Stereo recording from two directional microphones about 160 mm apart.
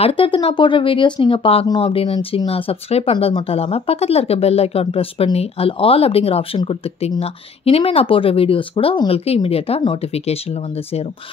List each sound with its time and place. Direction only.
0.0 s speech: 35° left (ahead or behind)